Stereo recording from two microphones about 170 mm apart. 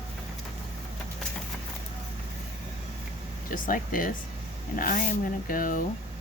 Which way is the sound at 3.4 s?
50° left (ahead or behind).